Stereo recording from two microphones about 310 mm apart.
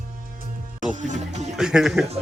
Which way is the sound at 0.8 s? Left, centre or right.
Right.